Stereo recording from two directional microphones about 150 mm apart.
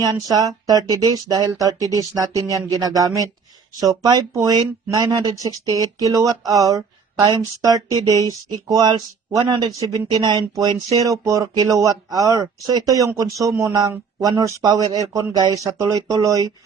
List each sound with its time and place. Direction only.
0.0 s speech: 25° right (ahead or behind)